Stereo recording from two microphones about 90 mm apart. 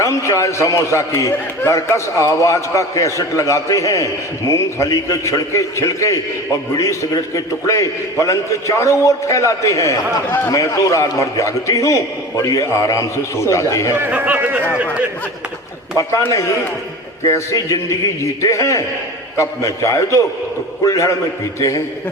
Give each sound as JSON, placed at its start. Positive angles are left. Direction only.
{"t": 0.0, "sound": "a man's voice", "side_deg": 35}
{"t": 13.9, "sound": "speech", "side_deg": -20}
{"t": 17.2, "sound": "a man's voice", "side_deg": 35}